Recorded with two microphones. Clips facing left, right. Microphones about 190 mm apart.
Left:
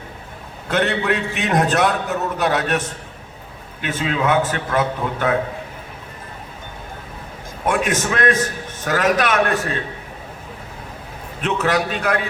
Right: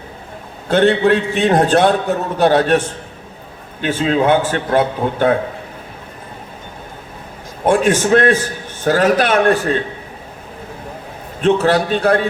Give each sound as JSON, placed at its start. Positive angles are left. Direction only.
{"t": 0.7, "sound": "a man's voice", "side_deg": -30}
{"t": 7.6, "sound": "a man's voice", "side_deg": -30}
{"t": 11.3, "sound": "a man's voice", "side_deg": -30}